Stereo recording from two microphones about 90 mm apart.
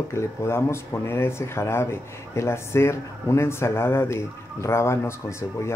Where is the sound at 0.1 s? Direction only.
30° left (ahead or behind).